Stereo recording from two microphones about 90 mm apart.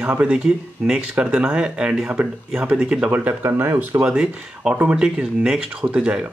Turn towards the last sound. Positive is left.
turn(degrees=-10)  # may be behind; listen again after turning